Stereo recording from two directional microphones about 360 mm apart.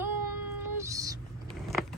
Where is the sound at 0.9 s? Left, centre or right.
Centre.